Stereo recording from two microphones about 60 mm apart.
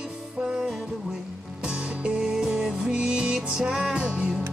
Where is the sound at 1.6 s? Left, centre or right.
Centre.